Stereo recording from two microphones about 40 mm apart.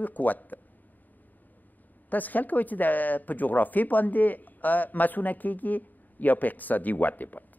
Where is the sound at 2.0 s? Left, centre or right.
Left.